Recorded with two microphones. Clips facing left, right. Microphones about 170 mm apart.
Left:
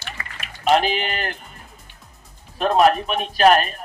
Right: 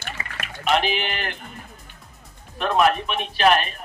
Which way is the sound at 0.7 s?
40° left (ahead or behind).